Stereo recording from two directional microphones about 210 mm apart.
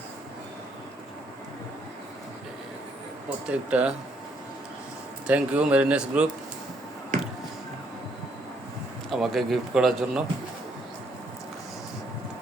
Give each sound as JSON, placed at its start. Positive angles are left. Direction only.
{"t": 3.2, "sound": "a man's voice", "side_deg": -5}
{"t": 5.2, "sound": "speech", "side_deg": -5}
{"t": 7.1, "sound": "music", "side_deg": -40}
{"t": 9.0, "sound": "a man's voice", "side_deg": 0}